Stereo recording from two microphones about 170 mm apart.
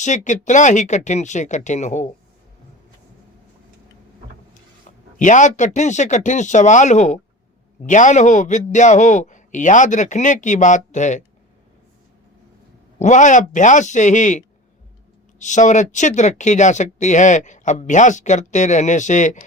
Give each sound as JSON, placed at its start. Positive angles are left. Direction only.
{"t": 0.0, "sound": "speech", "side_deg": 45}
{"t": 5.2, "sound": "speech", "side_deg": 45}
{"t": 13.0, "sound": "speech", "side_deg": 45}